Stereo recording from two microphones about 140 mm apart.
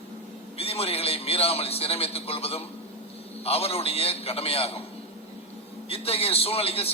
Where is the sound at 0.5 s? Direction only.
45° left (ahead or behind).